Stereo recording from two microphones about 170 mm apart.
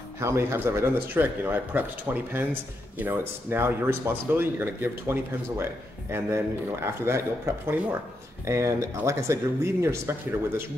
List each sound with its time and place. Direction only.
0.2 s speech: 15° right (ahead or behind)